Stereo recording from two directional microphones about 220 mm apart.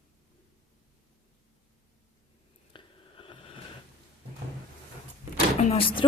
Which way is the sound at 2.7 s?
25° left (ahead or behind).